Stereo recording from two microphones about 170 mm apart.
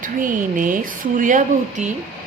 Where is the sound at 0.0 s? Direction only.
50° right (ahead or behind).